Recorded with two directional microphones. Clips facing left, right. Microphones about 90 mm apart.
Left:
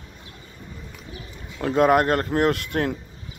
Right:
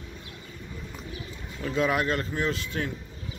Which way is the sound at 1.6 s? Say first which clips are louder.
Left 8 dB; 50° left (ahead or behind).